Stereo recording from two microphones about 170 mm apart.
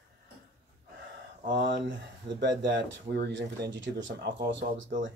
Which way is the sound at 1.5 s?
90° right.